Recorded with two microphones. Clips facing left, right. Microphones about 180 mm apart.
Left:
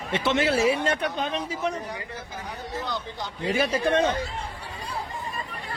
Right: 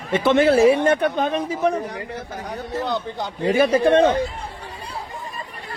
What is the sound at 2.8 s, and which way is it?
A man's voice, 60° right (ahead or behind).